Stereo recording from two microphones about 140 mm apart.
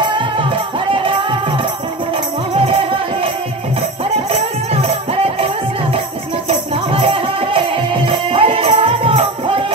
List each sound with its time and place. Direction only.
0.1 s music: 35° right (ahead or behind)
2.5 s music: 40° right (ahead or behind)
4.8 s music: 45° right (ahead or behind)
6.7 s music: 40° right (ahead or behind)